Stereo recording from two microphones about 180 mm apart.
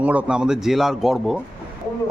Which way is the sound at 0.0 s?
10° right (ahead or behind).